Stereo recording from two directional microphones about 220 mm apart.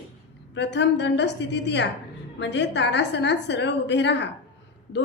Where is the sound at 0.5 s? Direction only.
50° left (ahead or behind).